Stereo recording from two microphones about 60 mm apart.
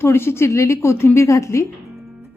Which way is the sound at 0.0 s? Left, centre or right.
Left.